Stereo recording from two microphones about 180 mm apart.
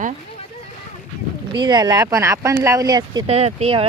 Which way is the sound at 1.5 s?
25° right (ahead or behind).